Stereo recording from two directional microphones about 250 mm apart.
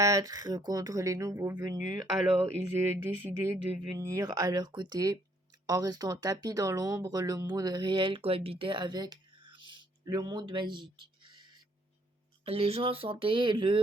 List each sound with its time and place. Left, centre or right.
0.0 s speech: centre